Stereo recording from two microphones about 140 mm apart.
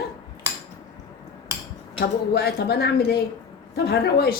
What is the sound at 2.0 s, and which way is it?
Speech, 90° left.